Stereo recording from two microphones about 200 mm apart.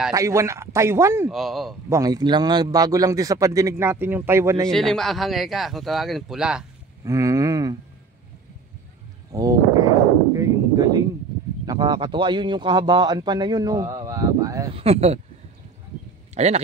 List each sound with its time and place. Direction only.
0.1 s speech: 15° right (ahead or behind)
1.3 s speech: centre (ahead or behind)
1.9 s speech: 20° right (ahead or behind)
4.6 s speech: centre (ahead or behind)
7.1 s speech: 15° right (ahead or behind)
9.3 s a sound: 15° right (ahead or behind)
11.6 s speech: 20° right (ahead or behind)
14.8 s speech: 30° right (ahead or behind)
16.3 s speech: 35° right (ahead or behind)